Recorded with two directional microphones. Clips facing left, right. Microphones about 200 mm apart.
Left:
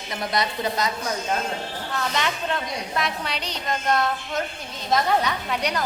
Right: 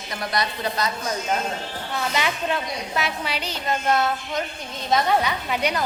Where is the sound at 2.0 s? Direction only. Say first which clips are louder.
Right 1 dB; 10° right (ahead or behind).